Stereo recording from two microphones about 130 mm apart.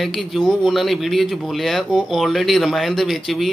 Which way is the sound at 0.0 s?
Centre (ahead or behind).